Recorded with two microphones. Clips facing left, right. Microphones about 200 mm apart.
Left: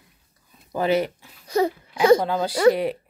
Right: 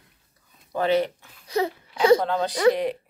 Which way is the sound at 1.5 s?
45° left (ahead or behind).